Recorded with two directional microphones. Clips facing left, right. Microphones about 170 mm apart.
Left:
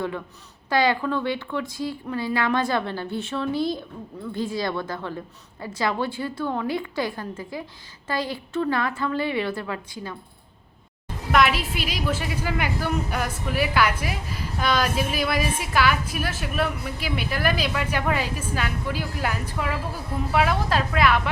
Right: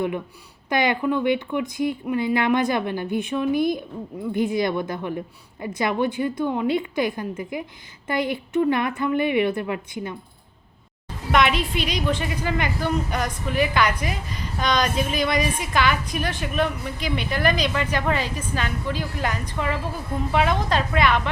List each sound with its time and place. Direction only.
0.7 s a woman's voice: 20° right (ahead or behind)
11.3 s a woman's voice: centre (ahead or behind)